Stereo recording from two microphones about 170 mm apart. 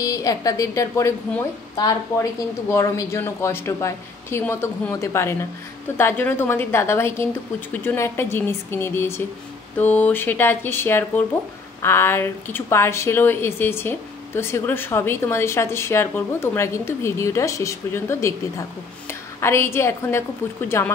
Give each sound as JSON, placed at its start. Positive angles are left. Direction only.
{"t": 0.0, "sound": "a woman's voice", "side_deg": 20}